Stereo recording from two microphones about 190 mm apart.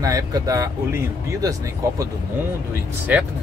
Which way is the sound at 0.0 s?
20° right (ahead or behind).